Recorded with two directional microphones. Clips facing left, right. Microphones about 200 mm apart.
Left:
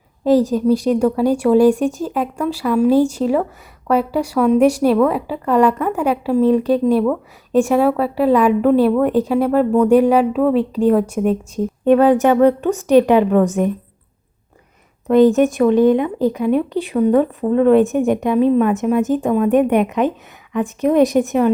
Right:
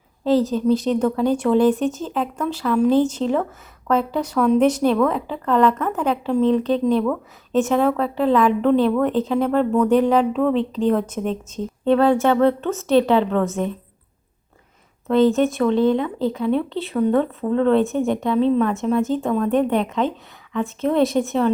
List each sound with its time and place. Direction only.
0.3 s speech: 15° left (ahead or behind)
15.0 s speech: 15° left (ahead or behind)